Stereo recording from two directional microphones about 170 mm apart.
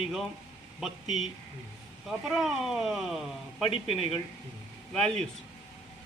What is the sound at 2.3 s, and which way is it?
Speech, centre (ahead or behind).